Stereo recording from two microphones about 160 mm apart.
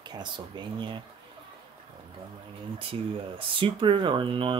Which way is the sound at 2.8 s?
35° right (ahead or behind).